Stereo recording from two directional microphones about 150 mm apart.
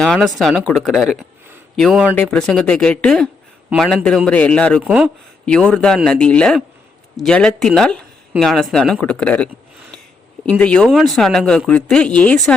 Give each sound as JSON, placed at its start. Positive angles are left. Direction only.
{"t": 0.0, "sound": "speech", "side_deg": 0}
{"t": 4.8, "sound": "speech", "side_deg": -10}
{"t": 5.5, "sound": "speech", "side_deg": 5}